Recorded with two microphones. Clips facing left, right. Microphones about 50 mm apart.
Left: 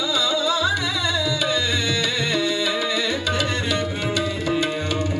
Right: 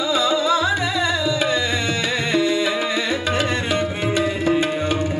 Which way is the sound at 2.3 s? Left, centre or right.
Right.